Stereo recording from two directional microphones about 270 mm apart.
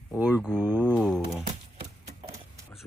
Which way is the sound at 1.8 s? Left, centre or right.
Right.